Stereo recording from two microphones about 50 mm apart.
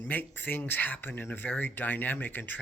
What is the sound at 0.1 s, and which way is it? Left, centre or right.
Speech, left.